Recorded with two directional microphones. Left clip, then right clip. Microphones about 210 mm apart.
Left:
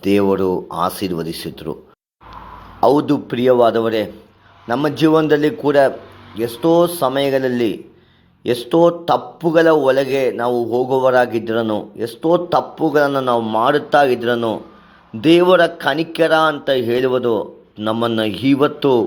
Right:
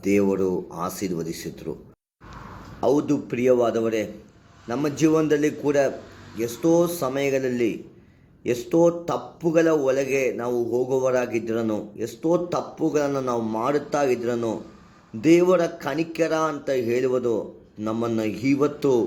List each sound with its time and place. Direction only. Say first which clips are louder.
0.0 s a man's voice: left 6 dB; centre (ahead or behind)
2.8 s a man's voice: left 8 dB; centre (ahead or behind)
10.1 s a man's voice: left 6 dB; 55° left (ahead or behind)
10.3 s a man's voice: left 7 dB; centre (ahead or behind)
17.1 s speech: left 6 dB; 15° left (ahead or behind)
17.7 s a man's voice: left 8 dB; centre (ahead or behind)